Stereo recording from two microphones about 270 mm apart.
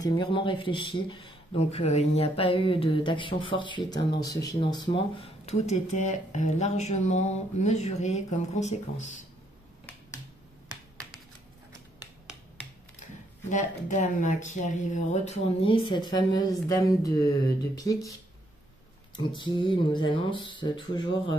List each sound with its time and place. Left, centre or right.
0.0 s speech: centre
13.5 s speech: left
19.1 s speech: centre